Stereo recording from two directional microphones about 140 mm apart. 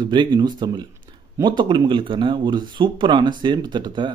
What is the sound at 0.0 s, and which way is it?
Speech, 35° right (ahead or behind).